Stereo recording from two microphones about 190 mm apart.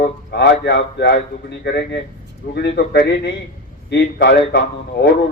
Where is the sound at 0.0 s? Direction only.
60° left (ahead or behind).